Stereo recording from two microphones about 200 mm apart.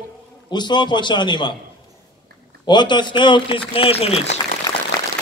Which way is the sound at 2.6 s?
20° left (ahead or behind).